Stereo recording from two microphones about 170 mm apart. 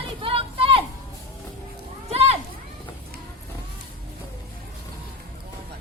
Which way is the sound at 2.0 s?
35° right (ahead or behind).